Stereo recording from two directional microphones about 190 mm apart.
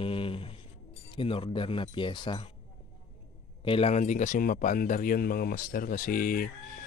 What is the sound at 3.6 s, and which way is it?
A man's voice, 30° left (ahead or behind).